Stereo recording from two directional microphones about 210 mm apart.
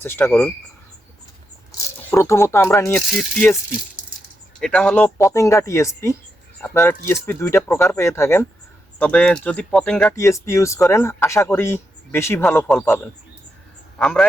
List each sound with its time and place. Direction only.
0.0 s speech: 10° left (ahead or behind)
2.0 s speech: 10° left (ahead or behind)
4.6 s speech: 5° left (ahead or behind)